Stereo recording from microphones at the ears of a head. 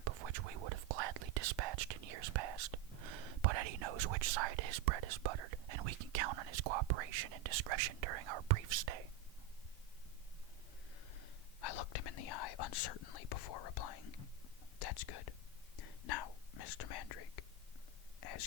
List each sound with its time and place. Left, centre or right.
0.0 s whispering: right
11.1 s whispering: left